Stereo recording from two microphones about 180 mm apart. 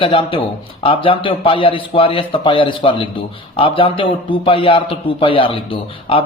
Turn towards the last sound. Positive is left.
turn(degrees=30)  # may be behind; listen again after turning